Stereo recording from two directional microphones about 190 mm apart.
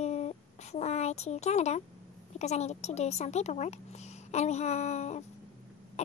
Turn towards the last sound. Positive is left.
turn(degrees=35)  # may be behind; listen again after turning